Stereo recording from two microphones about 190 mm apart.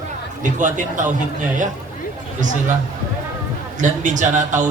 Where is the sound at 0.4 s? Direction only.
40° right (ahead or behind).